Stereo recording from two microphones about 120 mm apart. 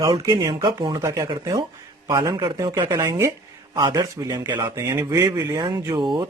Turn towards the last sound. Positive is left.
turn(degrees=-45)  # may be behind; listen again after turning